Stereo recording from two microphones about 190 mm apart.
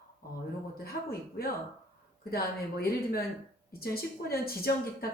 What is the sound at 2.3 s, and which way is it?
A woman's voice, 55° left (ahead or behind).